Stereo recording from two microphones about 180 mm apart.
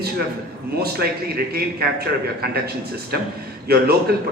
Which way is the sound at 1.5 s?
60° right (ahead or behind).